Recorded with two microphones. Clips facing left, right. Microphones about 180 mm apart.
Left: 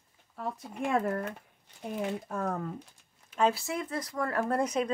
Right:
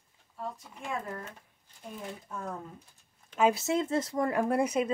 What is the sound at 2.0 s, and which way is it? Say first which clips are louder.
Speech: left 8 dB; 70° left (ahead or behind).